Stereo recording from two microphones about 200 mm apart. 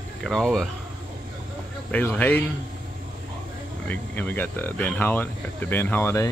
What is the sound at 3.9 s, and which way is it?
Speech, 10° left (ahead or behind).